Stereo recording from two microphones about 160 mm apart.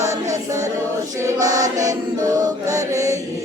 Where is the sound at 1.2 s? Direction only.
20° right (ahead or behind).